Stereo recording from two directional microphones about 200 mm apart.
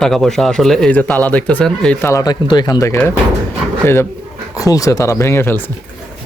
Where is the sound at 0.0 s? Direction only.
Centre (ahead or behind).